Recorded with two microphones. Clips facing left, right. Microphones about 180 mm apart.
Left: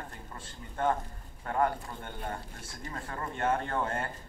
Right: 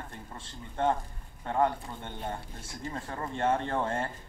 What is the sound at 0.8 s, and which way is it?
Speech, 25° right (ahead or behind).